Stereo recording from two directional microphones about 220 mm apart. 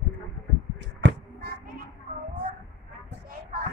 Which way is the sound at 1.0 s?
55° right (ahead or behind).